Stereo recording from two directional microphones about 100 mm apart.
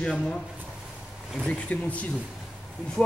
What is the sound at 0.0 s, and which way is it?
Speech, 10° left (ahead or behind).